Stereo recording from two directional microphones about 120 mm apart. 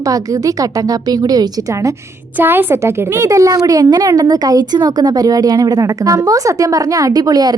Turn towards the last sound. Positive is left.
turn(degrees=-35)  # may be behind; listen again after turning